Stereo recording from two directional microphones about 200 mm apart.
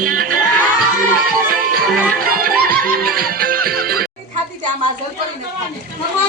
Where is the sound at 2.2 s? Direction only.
45° right (ahead or behind).